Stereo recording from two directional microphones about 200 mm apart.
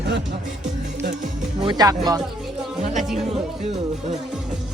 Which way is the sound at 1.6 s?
20° right (ahead or behind).